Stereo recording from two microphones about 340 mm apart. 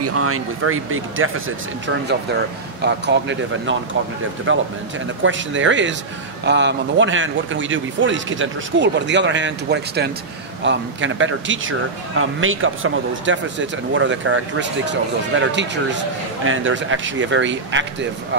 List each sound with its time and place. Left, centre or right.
0.0 s speech: right
2.8 s speech: right